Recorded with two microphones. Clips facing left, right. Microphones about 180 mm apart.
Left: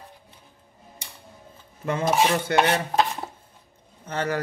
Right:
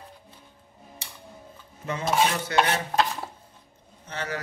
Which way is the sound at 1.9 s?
55° left (ahead or behind).